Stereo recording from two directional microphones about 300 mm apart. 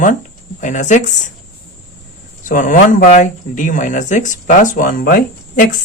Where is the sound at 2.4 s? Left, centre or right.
Left.